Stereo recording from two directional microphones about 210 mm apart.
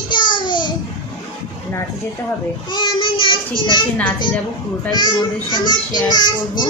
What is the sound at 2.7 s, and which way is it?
Child singing, 25° left (ahead or behind).